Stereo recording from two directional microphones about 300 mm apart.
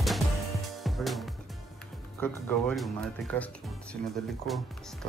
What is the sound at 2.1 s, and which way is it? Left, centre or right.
Speech, centre.